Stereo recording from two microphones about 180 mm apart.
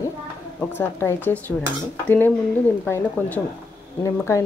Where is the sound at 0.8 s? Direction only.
15° left (ahead or behind).